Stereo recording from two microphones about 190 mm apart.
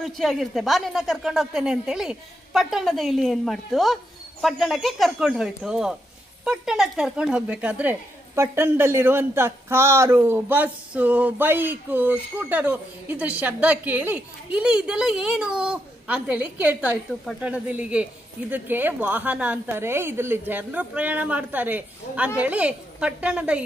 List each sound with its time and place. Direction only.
0.0 s a woman's voice: centre (ahead or behind)